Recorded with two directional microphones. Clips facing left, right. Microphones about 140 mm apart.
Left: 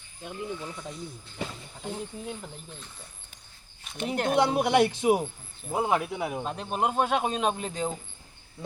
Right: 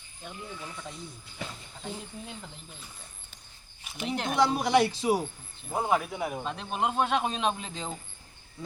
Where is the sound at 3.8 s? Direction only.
5° right (ahead or behind).